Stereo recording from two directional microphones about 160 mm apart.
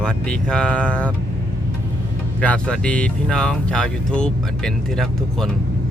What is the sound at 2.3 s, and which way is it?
Speech, 5° left (ahead or behind).